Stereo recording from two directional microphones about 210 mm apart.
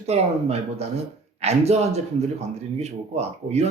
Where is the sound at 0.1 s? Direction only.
30° right (ahead or behind).